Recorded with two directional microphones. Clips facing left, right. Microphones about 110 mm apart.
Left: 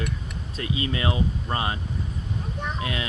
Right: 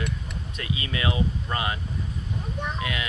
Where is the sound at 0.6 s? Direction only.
30° left (ahead or behind).